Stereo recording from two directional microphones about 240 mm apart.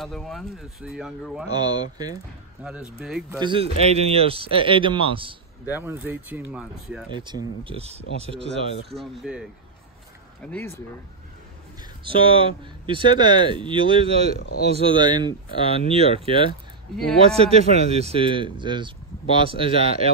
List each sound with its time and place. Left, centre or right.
0.0 s speech: centre
1.5 s speech: centre
2.6 s speech: centre
3.3 s speech: right
5.7 s speech: centre
7.2 s speech: centre
8.9 s speech: centre
12.1 s speech: right